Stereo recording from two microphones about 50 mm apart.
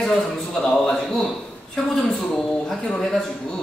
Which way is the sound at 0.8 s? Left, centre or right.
Centre.